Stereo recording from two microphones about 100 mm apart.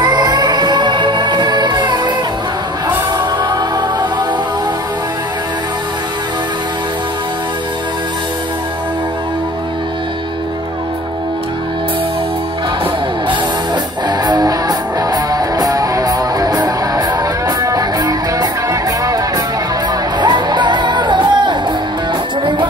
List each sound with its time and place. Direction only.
0.0 s music: 45° right (ahead or behind)
14.0 s music: 45° right (ahead or behind)
20.2 s music: 50° right (ahead or behind)